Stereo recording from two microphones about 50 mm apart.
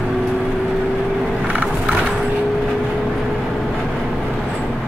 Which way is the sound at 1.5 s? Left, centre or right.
Right.